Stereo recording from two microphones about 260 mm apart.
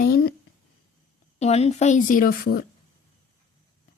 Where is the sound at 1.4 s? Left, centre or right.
Left.